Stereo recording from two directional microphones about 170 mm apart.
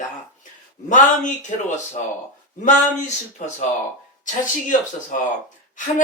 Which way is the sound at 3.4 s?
45° left (ahead or behind).